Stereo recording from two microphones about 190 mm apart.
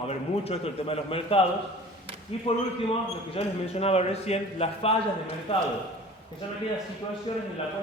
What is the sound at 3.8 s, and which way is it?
A man's voice, 35° left (ahead or behind).